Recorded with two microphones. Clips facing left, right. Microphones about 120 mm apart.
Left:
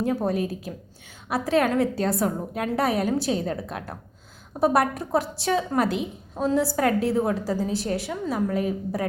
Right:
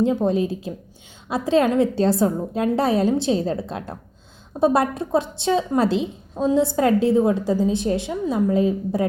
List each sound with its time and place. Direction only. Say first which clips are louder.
0.3 s a woman's voice: right 5 dB; 25° right (ahead or behind)